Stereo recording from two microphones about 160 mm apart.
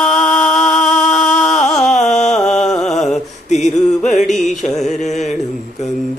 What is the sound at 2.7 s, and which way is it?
Mantra, 5° left (ahead or behind).